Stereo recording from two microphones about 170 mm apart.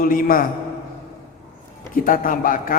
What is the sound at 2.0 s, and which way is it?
Speech, 55° left (ahead or behind).